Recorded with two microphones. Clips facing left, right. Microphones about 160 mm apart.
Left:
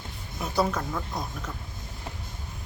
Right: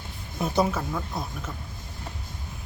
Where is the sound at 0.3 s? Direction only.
20° right (ahead or behind).